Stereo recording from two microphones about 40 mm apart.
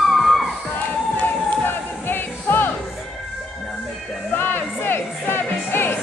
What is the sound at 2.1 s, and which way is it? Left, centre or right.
Music, left.